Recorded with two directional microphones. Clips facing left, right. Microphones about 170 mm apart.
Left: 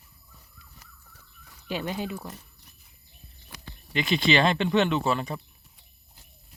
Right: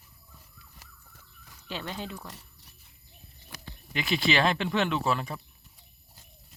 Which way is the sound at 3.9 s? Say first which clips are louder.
Left 3 dB; 5° right (ahead or behind).